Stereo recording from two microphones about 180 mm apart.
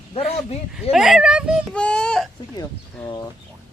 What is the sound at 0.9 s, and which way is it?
Speech, centre (ahead or behind).